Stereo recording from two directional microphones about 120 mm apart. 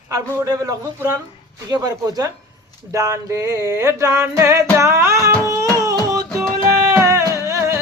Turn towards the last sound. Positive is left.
turn(degrees=-25)  # may be behind; listen again after turning